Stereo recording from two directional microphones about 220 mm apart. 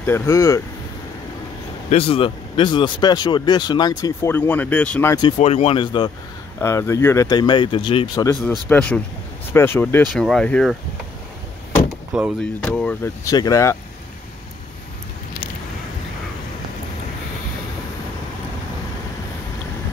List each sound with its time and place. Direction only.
0.0 s speech: 10° left (ahead or behind)
1.9 s speech: 25° left (ahead or behind)
5.4 s speech: 30° left (ahead or behind); by 10.8 s 5° left (ahead or behind)
12.4 s speech: 5° left (ahead or behind)